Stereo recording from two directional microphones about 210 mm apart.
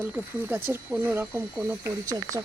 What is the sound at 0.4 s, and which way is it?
Speech, 10° right (ahead or behind).